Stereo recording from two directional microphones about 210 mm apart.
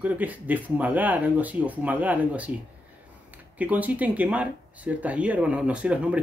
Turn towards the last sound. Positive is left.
turn(degrees=-5)  # may be behind; listen again after turning